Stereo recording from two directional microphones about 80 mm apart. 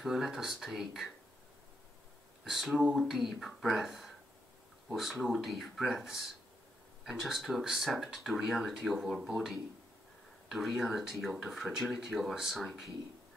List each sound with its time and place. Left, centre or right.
0.0 s speech: centre
2.4 s speech: centre